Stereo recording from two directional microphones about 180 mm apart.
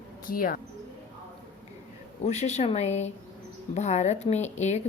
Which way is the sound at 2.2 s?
40° left (ahead or behind).